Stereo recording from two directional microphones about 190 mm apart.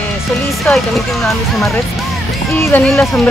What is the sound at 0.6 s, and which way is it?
Speech, centre (ahead or behind).